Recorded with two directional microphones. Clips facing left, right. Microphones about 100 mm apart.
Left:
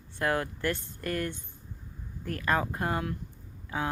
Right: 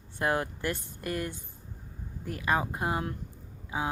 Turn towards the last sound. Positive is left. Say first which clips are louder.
# even
turn(degrees=-15)  # may be behind; listen again after turning